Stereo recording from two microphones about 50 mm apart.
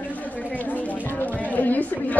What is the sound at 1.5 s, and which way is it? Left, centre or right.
Speech, left.